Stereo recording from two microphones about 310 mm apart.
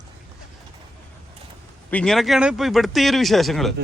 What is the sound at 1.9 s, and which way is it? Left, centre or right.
Speech, centre.